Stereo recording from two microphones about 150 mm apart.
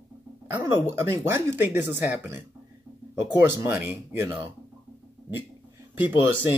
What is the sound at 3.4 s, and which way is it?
Speech, 15° right (ahead or behind).